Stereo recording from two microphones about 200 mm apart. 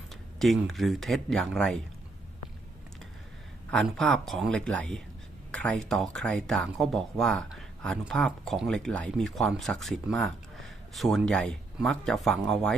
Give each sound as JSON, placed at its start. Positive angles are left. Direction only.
{"t": 0.1, "sound": "speech", "side_deg": 0}
{"t": 3.7, "sound": "speech", "side_deg": 5}